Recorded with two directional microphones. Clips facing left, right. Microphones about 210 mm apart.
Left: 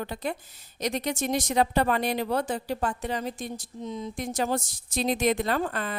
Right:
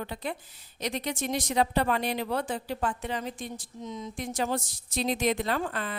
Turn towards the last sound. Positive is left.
turn(degrees=45)  # may be behind; listen again after turning